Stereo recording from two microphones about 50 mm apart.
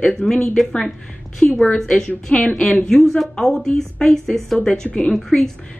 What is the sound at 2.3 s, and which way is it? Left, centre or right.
Speech, left.